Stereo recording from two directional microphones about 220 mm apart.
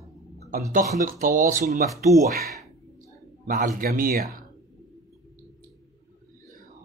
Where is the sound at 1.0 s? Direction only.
35° right (ahead or behind).